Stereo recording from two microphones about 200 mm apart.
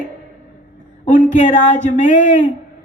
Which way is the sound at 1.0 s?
40° left (ahead or behind).